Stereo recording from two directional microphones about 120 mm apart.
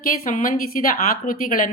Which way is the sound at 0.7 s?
90° left.